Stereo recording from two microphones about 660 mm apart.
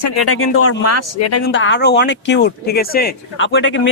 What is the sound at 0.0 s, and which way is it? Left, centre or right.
Speech, left.